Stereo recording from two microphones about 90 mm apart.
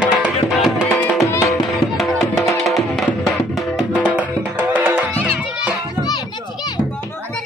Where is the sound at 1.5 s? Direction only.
Centre (ahead or behind).